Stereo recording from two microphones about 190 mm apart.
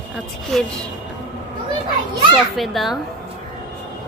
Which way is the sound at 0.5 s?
Centre (ahead or behind).